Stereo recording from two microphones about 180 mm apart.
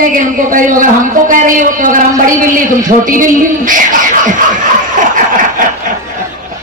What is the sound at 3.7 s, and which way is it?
Speech, 45° right (ahead or behind).